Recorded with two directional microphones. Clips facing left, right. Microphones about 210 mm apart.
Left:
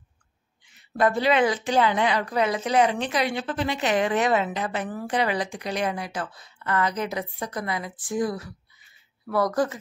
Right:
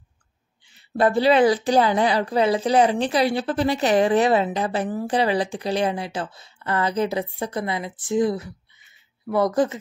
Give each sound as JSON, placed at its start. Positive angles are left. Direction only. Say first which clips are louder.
{"t": 0.7, "sound": "a woman's voice", "louder": "right 3 dB", "side_deg": -30}